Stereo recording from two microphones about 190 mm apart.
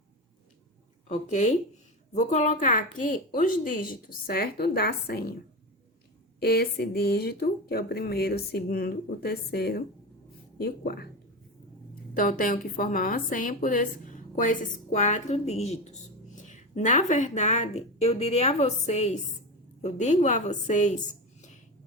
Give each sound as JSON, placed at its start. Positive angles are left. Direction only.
{"t": 1.0, "sound": "a woman's voice", "side_deg": 40}
{"t": 6.4, "sound": "speech", "side_deg": 55}
{"t": 12.1, "sound": "a woman's voice", "side_deg": 45}